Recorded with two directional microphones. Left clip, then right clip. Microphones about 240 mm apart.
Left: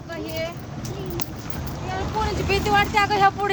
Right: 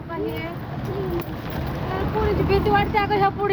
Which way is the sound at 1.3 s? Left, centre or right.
Right.